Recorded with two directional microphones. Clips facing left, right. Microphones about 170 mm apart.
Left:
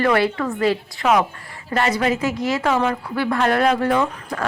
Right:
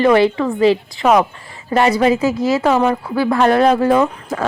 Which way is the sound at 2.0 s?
25° right (ahead or behind).